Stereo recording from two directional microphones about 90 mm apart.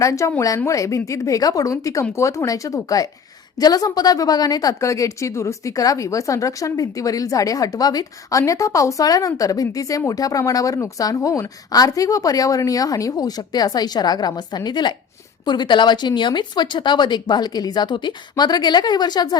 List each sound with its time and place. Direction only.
0.0 s a woman's voice: 35° left (ahead or behind); by 19.4 s 50° left (ahead or behind)